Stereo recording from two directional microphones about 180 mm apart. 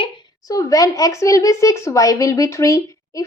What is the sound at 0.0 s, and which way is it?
A woman's voice, 20° left (ahead or behind).